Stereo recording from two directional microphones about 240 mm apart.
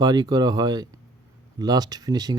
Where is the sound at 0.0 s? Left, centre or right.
Centre.